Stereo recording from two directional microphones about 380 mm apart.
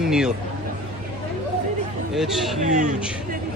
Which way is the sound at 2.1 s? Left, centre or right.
Centre.